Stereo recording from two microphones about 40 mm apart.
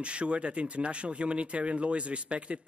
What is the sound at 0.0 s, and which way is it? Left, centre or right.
Speech, right.